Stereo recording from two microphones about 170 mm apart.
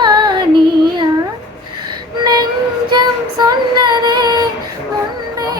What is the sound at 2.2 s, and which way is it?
Child singing, 25° right (ahead or behind).